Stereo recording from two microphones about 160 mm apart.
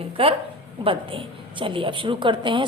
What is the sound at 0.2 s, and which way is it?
A woman's voice, 35° right (ahead or behind).